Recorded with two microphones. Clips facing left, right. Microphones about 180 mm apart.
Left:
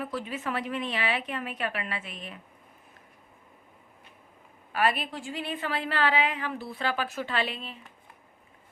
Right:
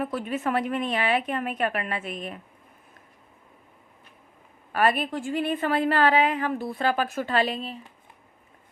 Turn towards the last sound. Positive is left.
turn(degrees=-40)  # may be behind; listen again after turning